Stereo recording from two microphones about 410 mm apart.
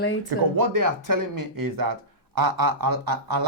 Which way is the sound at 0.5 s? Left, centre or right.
Right.